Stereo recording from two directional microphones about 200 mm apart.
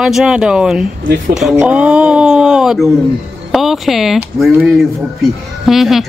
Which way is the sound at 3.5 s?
Centre (ahead or behind).